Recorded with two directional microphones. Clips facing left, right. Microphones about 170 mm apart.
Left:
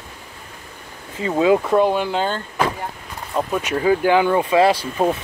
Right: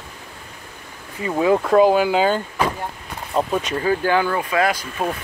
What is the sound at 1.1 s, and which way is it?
Speech, 20° left (ahead or behind).